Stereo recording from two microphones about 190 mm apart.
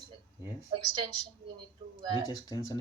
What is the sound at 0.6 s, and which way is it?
Speech, 25° right (ahead or behind).